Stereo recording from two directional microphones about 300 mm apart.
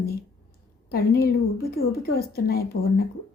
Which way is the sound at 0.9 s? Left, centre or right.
Left.